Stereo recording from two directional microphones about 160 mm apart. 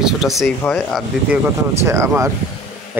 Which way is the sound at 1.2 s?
15° right (ahead or behind).